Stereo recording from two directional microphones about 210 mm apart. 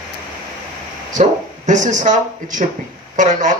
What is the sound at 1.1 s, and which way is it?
A man's voice, 35° right (ahead or behind).